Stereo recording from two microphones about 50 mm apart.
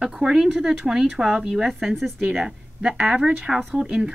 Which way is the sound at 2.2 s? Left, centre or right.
Centre.